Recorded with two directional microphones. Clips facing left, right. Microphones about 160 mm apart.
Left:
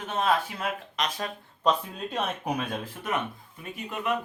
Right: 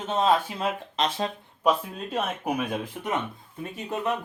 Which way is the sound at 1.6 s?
5° right (ahead or behind).